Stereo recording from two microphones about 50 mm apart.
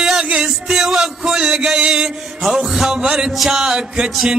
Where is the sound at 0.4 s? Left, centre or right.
Centre.